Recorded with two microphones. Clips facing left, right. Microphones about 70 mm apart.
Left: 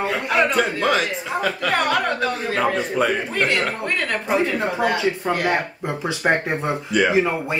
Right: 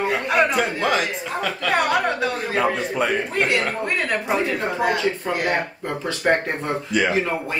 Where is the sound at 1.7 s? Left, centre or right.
Centre.